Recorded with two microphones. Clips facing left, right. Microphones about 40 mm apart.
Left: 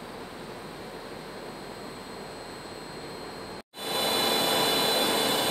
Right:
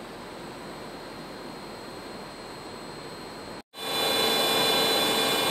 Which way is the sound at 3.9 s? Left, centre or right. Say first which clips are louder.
Right 1 dB; right.